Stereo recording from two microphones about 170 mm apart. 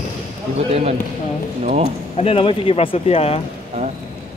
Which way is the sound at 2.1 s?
35° left (ahead or behind).